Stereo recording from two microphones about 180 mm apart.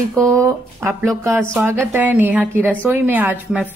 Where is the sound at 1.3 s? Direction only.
5° left (ahead or behind).